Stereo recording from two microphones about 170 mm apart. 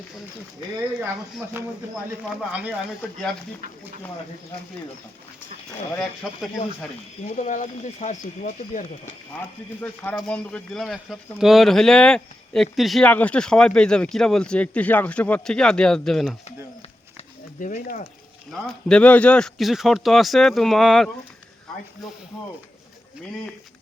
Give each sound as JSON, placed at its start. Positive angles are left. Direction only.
{"t": 0.9, "sound": "speech", "side_deg": -5}
{"t": 7.3, "sound": "speech", "side_deg": 45}
{"t": 9.8, "sound": "speech", "side_deg": 10}
{"t": 17.6, "sound": "speech", "side_deg": 50}
{"t": 18.5, "sound": "speech", "side_deg": 5}